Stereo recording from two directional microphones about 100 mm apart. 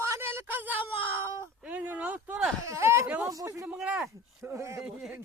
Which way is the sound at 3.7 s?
15° right (ahead or behind).